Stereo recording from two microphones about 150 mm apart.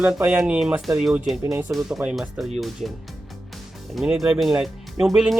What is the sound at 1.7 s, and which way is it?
Speech, 5° right (ahead or behind).